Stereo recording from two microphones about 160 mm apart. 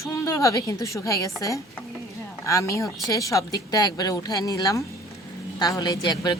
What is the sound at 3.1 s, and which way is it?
A woman's voice, 20° left (ahead or behind).